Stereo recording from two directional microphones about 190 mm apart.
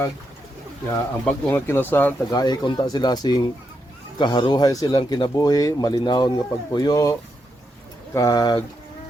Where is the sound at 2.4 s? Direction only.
20° left (ahead or behind).